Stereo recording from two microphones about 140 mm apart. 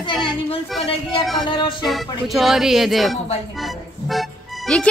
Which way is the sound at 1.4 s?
35° left (ahead or behind).